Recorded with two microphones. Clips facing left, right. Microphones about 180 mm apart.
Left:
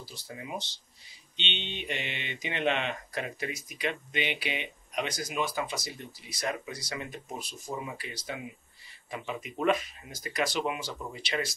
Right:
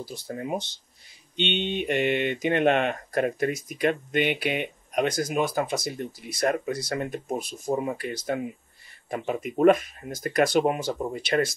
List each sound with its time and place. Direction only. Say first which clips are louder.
0.0 s speech: right 9 dB; 50° right (ahead or behind)